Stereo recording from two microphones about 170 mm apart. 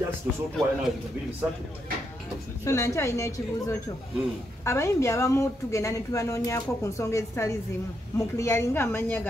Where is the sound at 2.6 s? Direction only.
15° left (ahead or behind).